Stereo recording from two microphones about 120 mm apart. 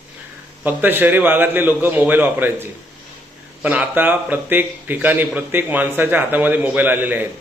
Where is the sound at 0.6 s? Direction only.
15° right (ahead or behind).